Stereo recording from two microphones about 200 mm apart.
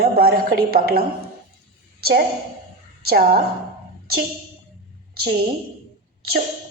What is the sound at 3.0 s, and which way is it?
Speech, 50° right (ahead or behind).